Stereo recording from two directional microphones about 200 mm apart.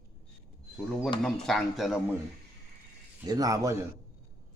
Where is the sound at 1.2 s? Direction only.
Centre (ahead or behind).